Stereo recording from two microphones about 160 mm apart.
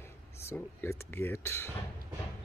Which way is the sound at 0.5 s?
15° left (ahead or behind).